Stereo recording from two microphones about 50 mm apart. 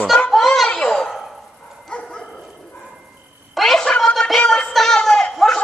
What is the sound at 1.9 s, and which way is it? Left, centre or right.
Dog, centre.